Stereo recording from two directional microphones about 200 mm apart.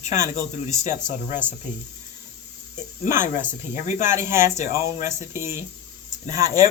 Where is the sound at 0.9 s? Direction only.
40° left (ahead or behind).